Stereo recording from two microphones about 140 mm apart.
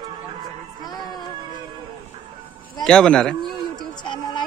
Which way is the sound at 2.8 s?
5° left (ahead or behind).